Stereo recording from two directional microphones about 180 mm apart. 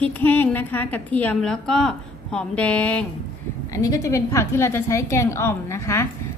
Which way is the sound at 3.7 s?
20° left (ahead or behind).